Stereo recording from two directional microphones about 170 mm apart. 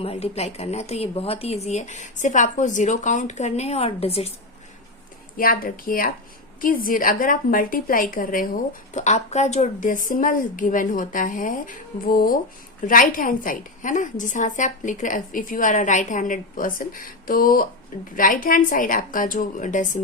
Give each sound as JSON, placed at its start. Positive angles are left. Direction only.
{"t": 0.0, "sound": "speech", "side_deg": 35}
{"t": 5.4, "sound": "a woman's voice", "side_deg": 55}
{"t": 8.9, "sound": "a woman's voice", "side_deg": 45}